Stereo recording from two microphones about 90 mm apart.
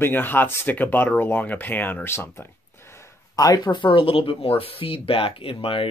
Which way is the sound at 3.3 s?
45° left (ahead or behind).